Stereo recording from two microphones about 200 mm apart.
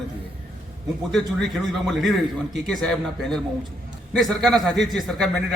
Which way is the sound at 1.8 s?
Centre (ahead or behind).